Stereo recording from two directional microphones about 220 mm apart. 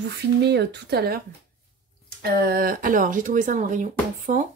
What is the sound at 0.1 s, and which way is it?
Speech, 50° right (ahead or behind).